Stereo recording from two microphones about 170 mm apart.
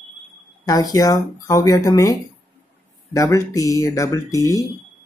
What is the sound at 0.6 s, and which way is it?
Speech, 25° left (ahead or behind).